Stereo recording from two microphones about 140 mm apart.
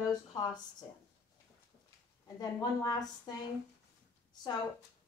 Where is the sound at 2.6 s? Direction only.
30° left (ahead or behind).